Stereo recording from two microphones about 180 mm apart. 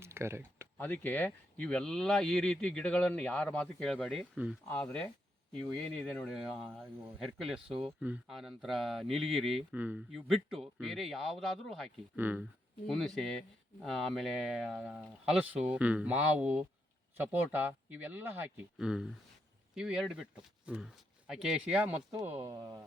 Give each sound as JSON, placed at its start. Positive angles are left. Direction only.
{"t": 0.0, "sound": "a sound", "side_deg": -15}
{"t": 0.8, "sound": "speech", "side_deg": 10}
{"t": 4.7, "sound": "speech", "side_deg": 10}
{"t": 12.1, "sound": "speech", "side_deg": -10}
{"t": 12.9, "sound": "speech", "side_deg": 0}